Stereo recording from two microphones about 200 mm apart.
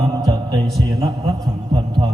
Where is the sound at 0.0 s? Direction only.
20° right (ahead or behind).